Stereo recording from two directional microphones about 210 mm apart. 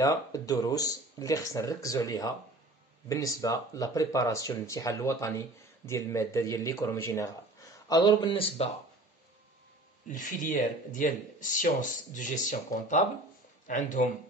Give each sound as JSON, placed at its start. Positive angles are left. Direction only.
{"t": 0.0, "sound": "speech", "side_deg": 15}
{"t": 10.0, "sound": "speech", "side_deg": 40}